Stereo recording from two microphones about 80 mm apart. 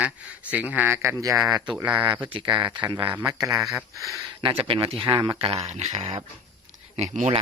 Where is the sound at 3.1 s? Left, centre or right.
Right.